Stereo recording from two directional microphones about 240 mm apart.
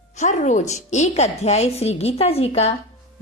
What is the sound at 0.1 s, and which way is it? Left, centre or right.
A woman's voice, left.